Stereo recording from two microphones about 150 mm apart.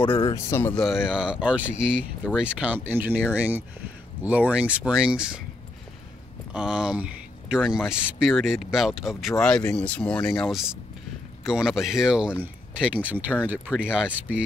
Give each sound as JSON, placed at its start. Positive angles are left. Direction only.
{"t": 0.0, "sound": "speech", "side_deg": 35}
{"t": 0.5, "sound": "speech", "side_deg": 15}
{"t": 0.7, "sound": "speech", "side_deg": -5}
{"t": 6.5, "sound": "speech", "side_deg": -5}